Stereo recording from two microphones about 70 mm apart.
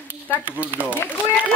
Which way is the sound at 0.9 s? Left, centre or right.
Left.